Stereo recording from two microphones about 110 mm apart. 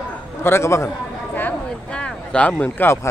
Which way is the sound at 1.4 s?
15° left (ahead or behind).